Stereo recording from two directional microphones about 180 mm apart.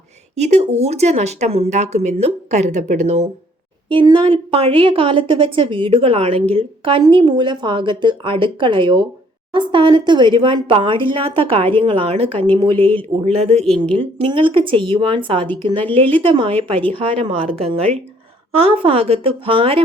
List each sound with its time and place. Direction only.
0.3 s speech: 40° right (ahead or behind)
3.8 s a woman's voice: 30° right (ahead or behind)